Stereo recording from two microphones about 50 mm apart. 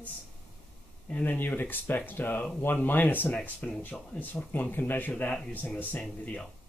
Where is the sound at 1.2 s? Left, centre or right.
Left.